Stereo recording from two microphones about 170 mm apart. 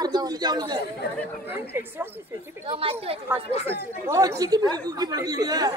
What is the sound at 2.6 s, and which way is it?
Speech, 35° right (ahead or behind).